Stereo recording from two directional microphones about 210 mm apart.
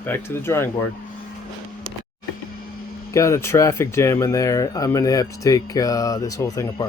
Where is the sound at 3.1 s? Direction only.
15° left (ahead or behind).